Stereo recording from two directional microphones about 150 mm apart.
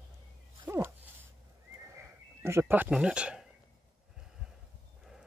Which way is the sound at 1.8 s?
20° right (ahead or behind).